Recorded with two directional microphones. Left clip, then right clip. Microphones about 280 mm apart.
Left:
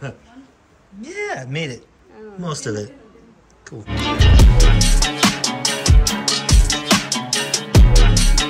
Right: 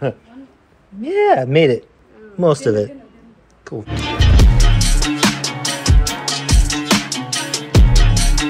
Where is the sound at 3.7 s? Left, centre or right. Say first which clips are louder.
Even; centre.